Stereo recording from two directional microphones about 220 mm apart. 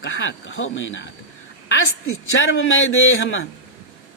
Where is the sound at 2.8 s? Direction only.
60° left (ahead or behind).